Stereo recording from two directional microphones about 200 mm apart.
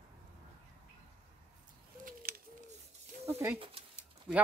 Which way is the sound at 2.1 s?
45° right (ahead or behind).